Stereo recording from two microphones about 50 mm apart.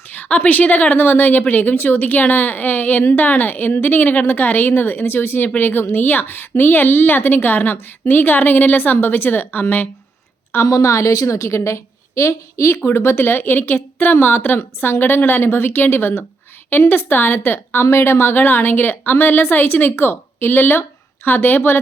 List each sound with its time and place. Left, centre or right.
0.1 s a woman's voice: left
10.7 s a woman's voice: left
12.8 s a woman's voice: left